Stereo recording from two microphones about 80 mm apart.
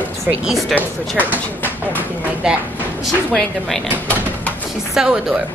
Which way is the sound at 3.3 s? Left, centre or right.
Centre.